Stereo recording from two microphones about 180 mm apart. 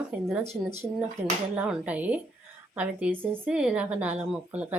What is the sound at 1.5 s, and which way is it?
Speech, 5° right (ahead or behind).